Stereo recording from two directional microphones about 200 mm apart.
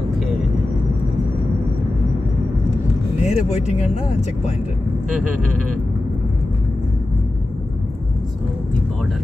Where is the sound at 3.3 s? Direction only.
35° left (ahead or behind).